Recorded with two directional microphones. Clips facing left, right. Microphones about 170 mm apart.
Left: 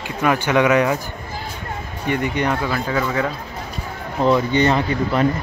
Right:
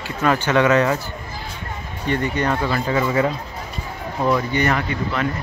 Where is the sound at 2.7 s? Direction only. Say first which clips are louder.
Right 1 dB; 5° right (ahead or behind).